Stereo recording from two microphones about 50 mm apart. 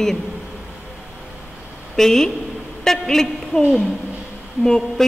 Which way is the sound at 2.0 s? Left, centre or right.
Centre.